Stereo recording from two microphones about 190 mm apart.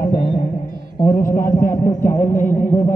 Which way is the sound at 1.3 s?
45° left (ahead or behind).